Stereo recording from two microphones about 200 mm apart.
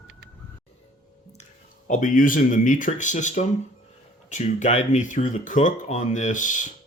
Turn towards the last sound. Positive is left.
turn(degrees=40)  # may be behind; listen again after turning